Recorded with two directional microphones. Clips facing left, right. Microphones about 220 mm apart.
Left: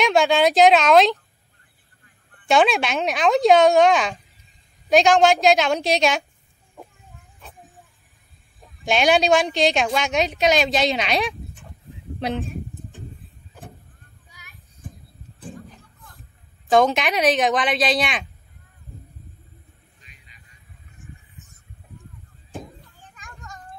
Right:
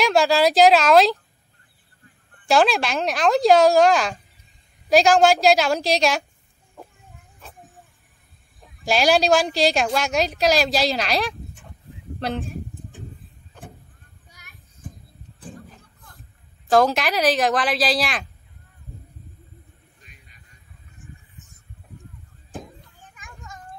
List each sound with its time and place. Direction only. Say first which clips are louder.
0.0 s a woman's voice: even; centre (ahead or behind)
2.4 s a woman's voice: even; centre (ahead or behind)
8.8 s a woman's voice: even; centre (ahead or behind)
12.2 s a sound: left 1 dB; centre (ahead or behind)
16.7 s a woman's voice: even; centre (ahead or behind)
20.0 s a sound: right 3 dB; 50° right (ahead or behind)
23.1 s children playing: even; centre (ahead or behind)